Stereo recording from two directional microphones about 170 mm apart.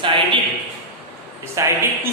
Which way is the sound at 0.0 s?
30° right (ahead or behind).